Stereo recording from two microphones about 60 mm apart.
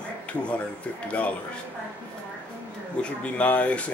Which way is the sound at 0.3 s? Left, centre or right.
Centre.